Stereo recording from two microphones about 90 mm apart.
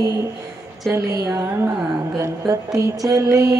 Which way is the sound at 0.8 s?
35° right (ahead or behind).